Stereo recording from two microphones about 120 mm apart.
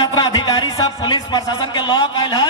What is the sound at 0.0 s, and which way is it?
Music, 35° left (ahead or behind).